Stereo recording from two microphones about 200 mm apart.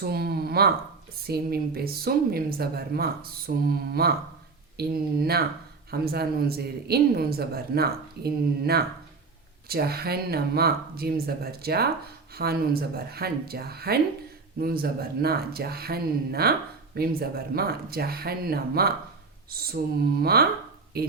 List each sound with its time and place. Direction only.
0.0 s speech: 50° right (ahead or behind)